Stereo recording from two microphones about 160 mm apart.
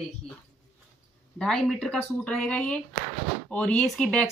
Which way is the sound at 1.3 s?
5° left (ahead or behind).